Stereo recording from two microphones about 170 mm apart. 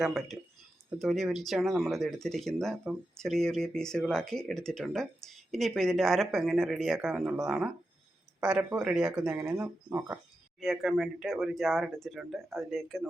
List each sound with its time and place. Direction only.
0.0 s speech: centre (ahead or behind)
9.5 s speech: 15° right (ahead or behind)
10.6 s speech: centre (ahead or behind)